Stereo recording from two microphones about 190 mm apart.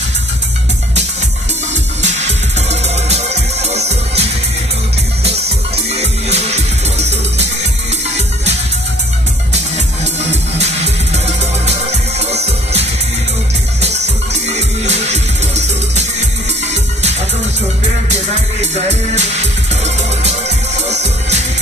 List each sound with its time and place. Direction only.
2.0 s music: 35° right (ahead or behind)
5.9 s music: 35° right (ahead or behind)
11.2 s music: 35° right (ahead or behind)
18.6 s music: 35° right (ahead or behind)